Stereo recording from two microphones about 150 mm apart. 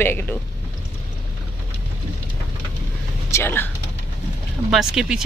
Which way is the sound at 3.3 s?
15° left (ahead or behind).